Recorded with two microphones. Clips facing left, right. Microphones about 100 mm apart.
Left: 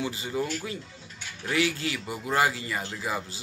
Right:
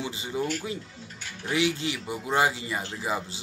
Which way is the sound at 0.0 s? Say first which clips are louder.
Even; 20° right (ahead or behind).